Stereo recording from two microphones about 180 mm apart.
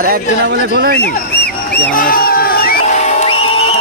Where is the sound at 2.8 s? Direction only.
40° left (ahead or behind).